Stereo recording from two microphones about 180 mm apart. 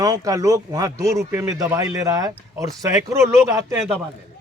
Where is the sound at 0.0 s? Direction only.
20° right (ahead or behind).